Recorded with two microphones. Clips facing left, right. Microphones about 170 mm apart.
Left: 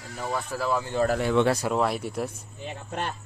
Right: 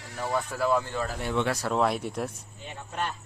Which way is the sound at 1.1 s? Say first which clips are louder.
Left 7 dB; 70° left (ahead or behind).